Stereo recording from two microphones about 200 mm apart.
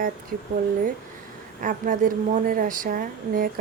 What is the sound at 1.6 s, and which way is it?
A woman's voice, 40° right (ahead or behind).